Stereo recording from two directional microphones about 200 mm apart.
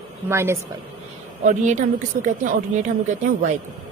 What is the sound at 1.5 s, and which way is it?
A woman's voice, 40° right (ahead or behind).